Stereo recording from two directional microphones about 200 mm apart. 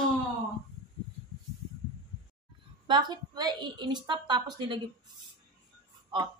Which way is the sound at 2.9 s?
20° right (ahead or behind).